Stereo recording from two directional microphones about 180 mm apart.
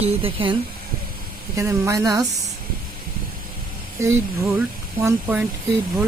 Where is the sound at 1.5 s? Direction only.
15° right (ahead or behind).